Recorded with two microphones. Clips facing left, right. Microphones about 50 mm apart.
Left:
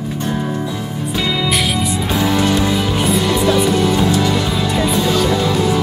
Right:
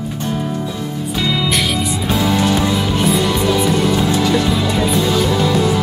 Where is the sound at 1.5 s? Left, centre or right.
Centre.